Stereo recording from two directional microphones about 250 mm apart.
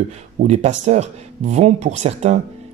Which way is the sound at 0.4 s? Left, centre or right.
Right.